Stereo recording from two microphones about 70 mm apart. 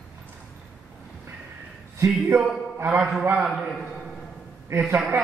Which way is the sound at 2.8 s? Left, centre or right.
Right.